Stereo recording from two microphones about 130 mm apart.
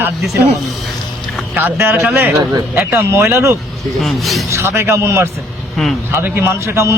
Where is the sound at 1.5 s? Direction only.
15° right (ahead or behind).